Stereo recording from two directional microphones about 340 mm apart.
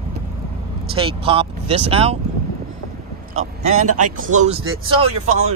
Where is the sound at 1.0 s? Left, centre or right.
Centre.